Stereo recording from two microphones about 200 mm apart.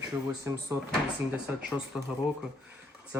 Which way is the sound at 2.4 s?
5° right (ahead or behind).